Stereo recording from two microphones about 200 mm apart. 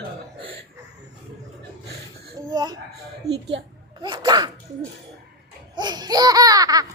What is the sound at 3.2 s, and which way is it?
Speech, 55° right (ahead or behind).